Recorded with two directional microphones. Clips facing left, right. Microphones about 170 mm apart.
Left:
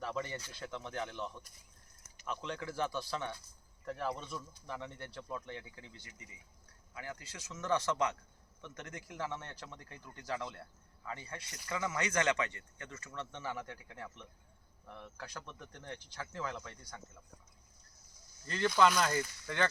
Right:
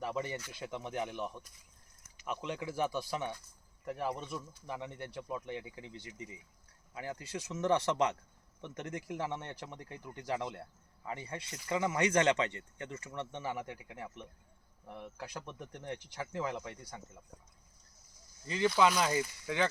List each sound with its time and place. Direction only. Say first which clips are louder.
0.0 s speech: right 2 dB; 10° right (ahead or behind)
18.4 s speech: right 1 dB; 5° right (ahead or behind)